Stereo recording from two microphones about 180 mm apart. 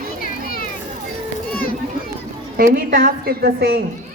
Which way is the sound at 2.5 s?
50° right (ahead or behind).